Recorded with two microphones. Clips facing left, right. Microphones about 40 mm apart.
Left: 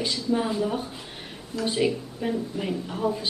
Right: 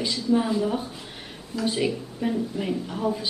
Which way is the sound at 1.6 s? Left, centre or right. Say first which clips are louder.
Left 1 dB; centre.